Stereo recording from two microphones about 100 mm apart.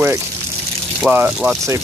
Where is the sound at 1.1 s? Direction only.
10° right (ahead or behind).